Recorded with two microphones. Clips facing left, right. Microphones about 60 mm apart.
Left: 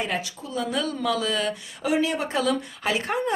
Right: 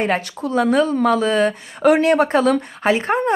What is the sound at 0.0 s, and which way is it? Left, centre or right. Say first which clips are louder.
Speech: right 8 dB; right.